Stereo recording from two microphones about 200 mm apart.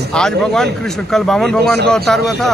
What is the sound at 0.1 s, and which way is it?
Speech, 5° left (ahead or behind).